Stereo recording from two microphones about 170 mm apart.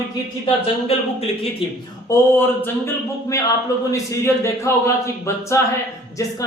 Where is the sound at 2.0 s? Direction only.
15° left (ahead or behind).